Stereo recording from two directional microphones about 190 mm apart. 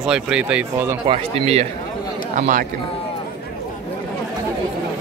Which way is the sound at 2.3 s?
45° right (ahead or behind).